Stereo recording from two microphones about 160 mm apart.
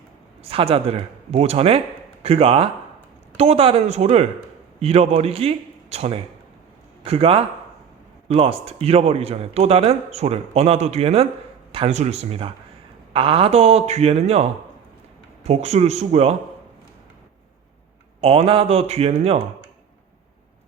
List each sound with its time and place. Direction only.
0.4 s a man's voice: 35° right (ahead or behind)
15.4 s a man's voice: 40° right (ahead or behind)
18.2 s a man's voice: 35° right (ahead or behind)